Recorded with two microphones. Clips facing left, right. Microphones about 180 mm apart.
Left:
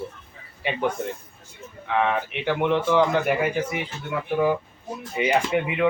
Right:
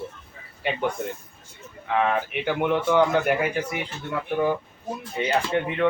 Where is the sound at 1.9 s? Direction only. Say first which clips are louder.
Even; centre (ahead or behind).